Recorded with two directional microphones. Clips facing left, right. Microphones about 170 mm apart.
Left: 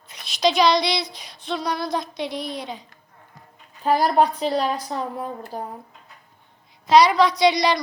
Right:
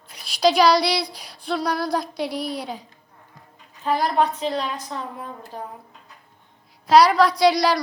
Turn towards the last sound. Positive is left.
turn(degrees=-5)  # may be behind; listen again after turning